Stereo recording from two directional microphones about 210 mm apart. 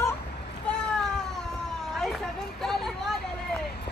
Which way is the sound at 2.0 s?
Centre (ahead or behind).